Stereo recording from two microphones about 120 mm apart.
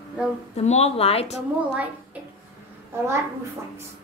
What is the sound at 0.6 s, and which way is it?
Speech, 65° left (ahead or behind).